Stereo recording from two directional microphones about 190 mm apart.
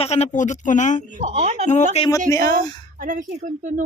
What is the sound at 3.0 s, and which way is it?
Speech, 40° right (ahead or behind).